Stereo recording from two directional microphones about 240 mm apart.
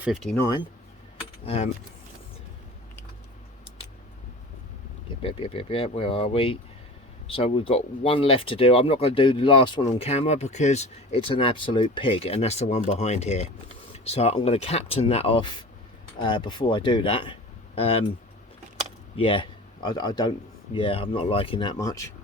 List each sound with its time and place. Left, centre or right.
0.0 s speech: centre
1.5 s speech: left
5.2 s speech: left
19.1 s speech: left